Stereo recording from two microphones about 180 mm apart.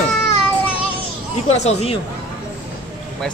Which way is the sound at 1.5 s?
35° left (ahead or behind).